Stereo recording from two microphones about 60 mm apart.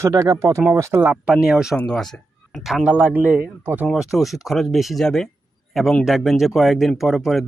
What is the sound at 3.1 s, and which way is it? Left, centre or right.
Speech, right.